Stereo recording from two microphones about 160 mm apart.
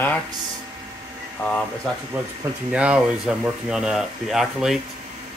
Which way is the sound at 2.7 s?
5° right (ahead or behind).